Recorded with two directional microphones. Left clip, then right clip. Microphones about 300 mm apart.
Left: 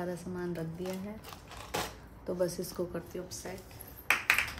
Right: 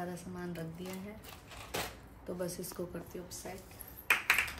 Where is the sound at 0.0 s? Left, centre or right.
Left.